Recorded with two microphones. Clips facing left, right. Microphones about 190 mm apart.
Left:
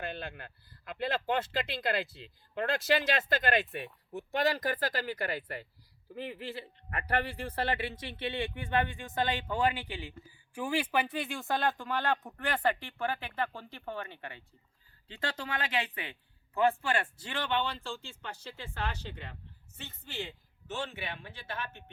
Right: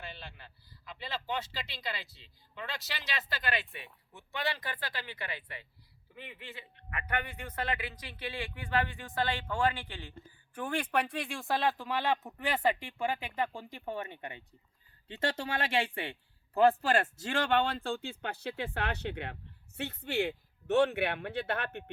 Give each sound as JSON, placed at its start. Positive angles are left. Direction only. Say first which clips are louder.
{"t": 0.0, "sound": "speech", "louder": "left 8 dB", "side_deg": 55}